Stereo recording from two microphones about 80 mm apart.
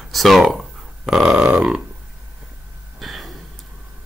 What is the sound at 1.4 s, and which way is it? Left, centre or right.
Burping, centre.